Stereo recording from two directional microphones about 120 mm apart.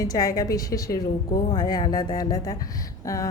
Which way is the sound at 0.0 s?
30° left (ahead or behind).